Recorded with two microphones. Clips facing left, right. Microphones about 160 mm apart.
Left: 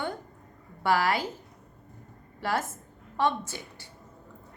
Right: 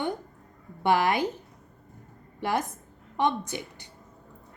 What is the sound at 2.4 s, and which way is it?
A woman's voice, 20° right (ahead or behind).